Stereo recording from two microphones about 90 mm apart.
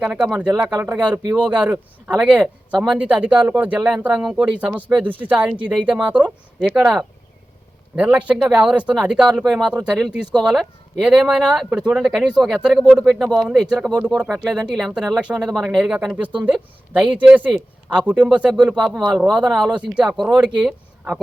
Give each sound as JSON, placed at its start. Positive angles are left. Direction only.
{"t": 0.0, "sound": "speech", "side_deg": -10}
{"t": 4.9, "sound": "speech", "side_deg": -20}
{"t": 20.7, "sound": "a sound", "side_deg": -10}